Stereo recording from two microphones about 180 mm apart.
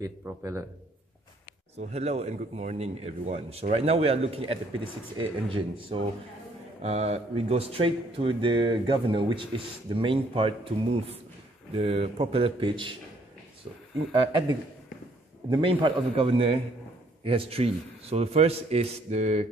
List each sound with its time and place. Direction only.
0.0 s a man's voice: 15° right (ahead or behind)
1.8 s speech: 35° right (ahead or behind)
15.5 s speech: 25° right (ahead or behind)